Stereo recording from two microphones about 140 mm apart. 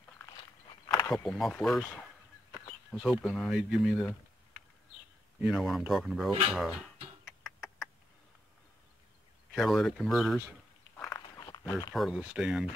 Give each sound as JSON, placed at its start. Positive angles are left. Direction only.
{"t": 1.1, "sound": "speech", "side_deg": 5}
{"t": 2.9, "sound": "speech", "side_deg": 0}
{"t": 5.4, "sound": "speech", "side_deg": -5}
{"t": 7.2, "sound": "a sound", "side_deg": 0}
{"t": 9.5, "sound": "speech", "side_deg": 0}
{"t": 11.1, "sound": "a sound", "side_deg": 25}
{"t": 11.9, "sound": "speech", "side_deg": -5}